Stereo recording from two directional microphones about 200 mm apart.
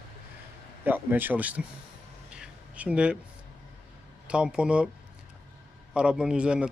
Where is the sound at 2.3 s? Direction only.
5° right (ahead or behind).